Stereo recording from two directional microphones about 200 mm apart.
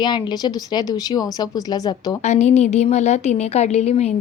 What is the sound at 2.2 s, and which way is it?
A woman's voice, 35° left (ahead or behind).